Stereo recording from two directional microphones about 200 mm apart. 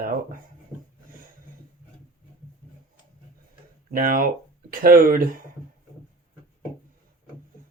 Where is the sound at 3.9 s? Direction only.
45° right (ahead or behind).